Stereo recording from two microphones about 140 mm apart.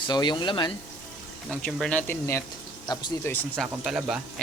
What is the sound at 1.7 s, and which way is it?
Speech, 5° left (ahead or behind).